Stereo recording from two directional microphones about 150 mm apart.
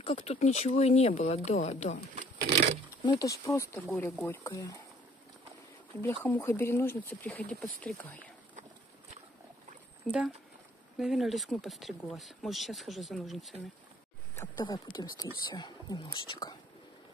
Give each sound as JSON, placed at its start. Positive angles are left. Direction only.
{"t": 0.0, "sound": "speech", "side_deg": 40}
{"t": 3.0, "sound": "speech", "side_deg": 25}
{"t": 5.9, "sound": "speech", "side_deg": 15}
{"t": 7.2, "sound": "speech", "side_deg": 5}
{"t": 10.0, "sound": "speech", "side_deg": -5}
{"t": 14.6, "sound": "speech", "side_deg": 25}